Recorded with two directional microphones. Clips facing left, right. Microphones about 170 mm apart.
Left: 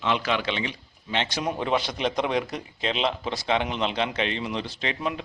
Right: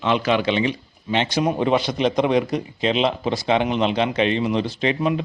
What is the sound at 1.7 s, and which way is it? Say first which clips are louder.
A man's voice: right 6 dB; centre (ahead or behind).